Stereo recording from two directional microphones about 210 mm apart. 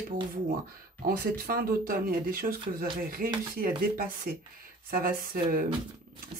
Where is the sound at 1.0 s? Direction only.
45° right (ahead or behind).